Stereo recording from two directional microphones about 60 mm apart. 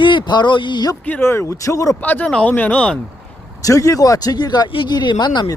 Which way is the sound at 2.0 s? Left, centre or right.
Left.